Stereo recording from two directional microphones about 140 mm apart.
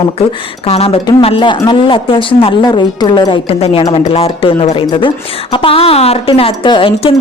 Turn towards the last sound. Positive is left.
turn(degrees=40)  # may be behind; listen again after turning